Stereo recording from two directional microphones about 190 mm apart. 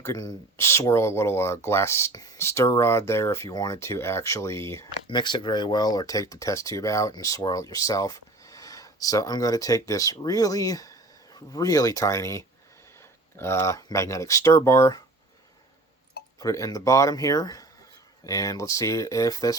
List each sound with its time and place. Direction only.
0.0 s speech: 15° left (ahead or behind)
16.4 s speech: 15° left (ahead or behind)